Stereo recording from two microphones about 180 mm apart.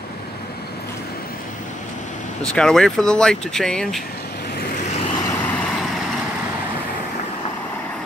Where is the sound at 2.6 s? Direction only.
5° left (ahead or behind).